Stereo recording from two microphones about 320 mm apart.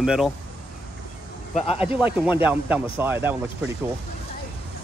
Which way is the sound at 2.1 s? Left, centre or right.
Centre.